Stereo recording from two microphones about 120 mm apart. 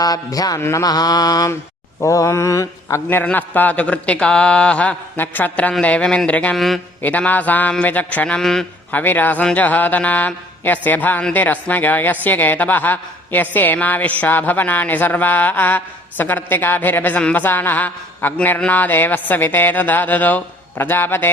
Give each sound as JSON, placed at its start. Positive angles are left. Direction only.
{"t": 0.0, "sound": "mantra", "side_deg": 30}
{"t": 2.0, "sound": "a woman's voice", "side_deg": 25}
{"t": 8.9, "sound": "a woman's voice", "side_deg": 15}